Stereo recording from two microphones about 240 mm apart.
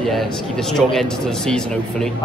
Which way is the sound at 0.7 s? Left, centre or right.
Centre.